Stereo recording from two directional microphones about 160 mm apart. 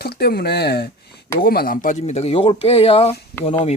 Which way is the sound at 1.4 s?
70° left (ahead or behind).